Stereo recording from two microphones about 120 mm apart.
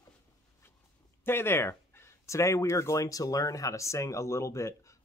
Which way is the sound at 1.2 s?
20° left (ahead or behind).